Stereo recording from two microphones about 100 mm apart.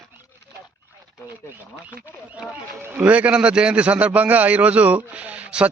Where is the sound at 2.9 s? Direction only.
15° right (ahead or behind).